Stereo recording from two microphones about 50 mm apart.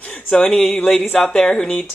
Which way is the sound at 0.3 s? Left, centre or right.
Centre.